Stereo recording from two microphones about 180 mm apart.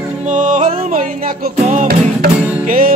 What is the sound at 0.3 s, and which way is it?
Music, 45° right (ahead or behind).